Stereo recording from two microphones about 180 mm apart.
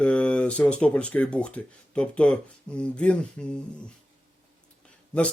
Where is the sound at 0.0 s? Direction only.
5° left (ahead or behind).